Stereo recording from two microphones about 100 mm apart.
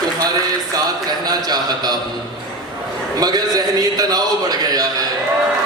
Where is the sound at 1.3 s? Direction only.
40° right (ahead or behind).